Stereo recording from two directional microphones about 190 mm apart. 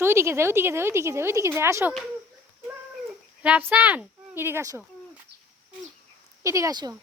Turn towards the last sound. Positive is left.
turn(degrees=-20)  # may be behind; listen again after turning